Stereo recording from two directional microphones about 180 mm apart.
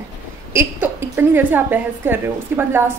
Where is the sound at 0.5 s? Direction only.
10° right (ahead or behind).